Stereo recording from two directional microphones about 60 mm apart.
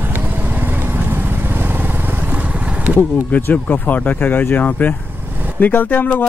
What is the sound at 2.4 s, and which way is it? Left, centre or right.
Vehicle, right.